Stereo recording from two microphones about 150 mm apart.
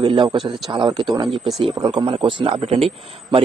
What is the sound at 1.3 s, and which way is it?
Speech, centre (ahead or behind).